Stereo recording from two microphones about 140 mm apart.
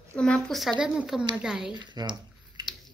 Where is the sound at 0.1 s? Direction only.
5° left (ahead or behind).